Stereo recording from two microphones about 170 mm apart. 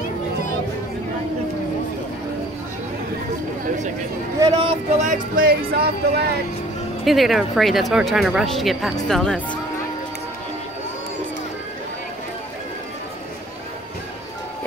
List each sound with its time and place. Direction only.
4.4 s speech: 30° right (ahead or behind)
5.0 s speech: 55° right (ahead or behind); by 6.3 s 70° right (ahead or behind)
7.1 s speech: centre (ahead or behind)